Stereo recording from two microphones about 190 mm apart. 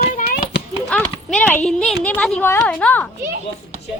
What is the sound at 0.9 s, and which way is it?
Speech, 5° left (ahead or behind).